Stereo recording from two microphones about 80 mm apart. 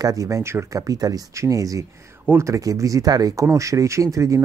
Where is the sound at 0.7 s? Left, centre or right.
Right.